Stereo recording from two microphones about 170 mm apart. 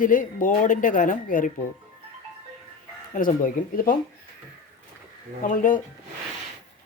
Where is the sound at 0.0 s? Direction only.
50° left (ahead or behind).